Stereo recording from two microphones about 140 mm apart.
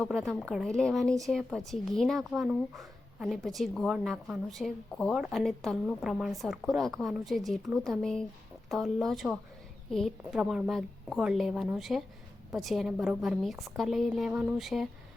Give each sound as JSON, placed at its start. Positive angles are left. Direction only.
{"t": 0.0, "sound": "speech", "side_deg": 0}